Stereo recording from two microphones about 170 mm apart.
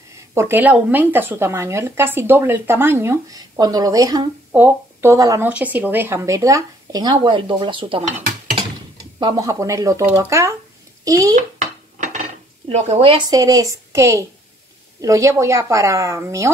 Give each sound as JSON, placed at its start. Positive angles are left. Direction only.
{"t": 0.3, "sound": "a woman's voice", "side_deg": -15}
{"t": 4.5, "sound": "speech", "side_deg": -10}
{"t": 9.2, "sound": "a woman's voice", "side_deg": -20}
{"t": 12.6, "sound": "a woman's voice", "side_deg": -40}